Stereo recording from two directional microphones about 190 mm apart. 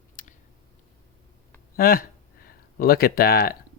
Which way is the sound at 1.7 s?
50° left (ahead or behind).